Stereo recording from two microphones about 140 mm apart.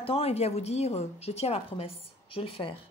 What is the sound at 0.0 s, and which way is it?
A woman's voice, 45° left (ahead or behind).